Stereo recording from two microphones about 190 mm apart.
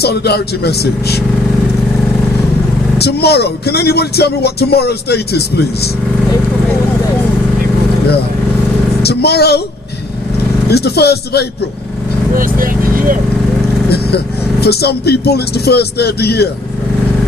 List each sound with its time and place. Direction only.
0.0 s speech: 60° left (ahead or behind)
3.0 s speech: 60° left (ahead or behind)
9.0 s speech: 60° left (ahead or behind)
10.7 s speech: 60° left (ahead or behind)
12.3 s speech: 45° right (ahead or behind)
14.6 s speech: 55° left (ahead or behind)